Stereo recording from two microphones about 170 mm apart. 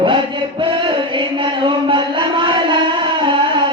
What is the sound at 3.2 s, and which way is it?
Music, 30° right (ahead or behind).